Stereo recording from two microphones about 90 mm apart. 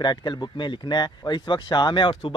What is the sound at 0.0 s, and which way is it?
Speech, 55° left (ahead or behind).